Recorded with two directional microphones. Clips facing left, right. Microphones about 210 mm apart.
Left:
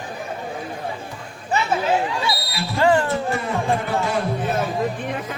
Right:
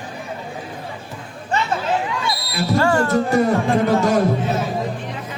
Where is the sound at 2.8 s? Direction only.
15° left (ahead or behind).